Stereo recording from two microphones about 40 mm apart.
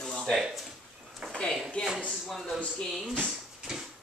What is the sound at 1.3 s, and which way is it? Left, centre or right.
Speech, centre.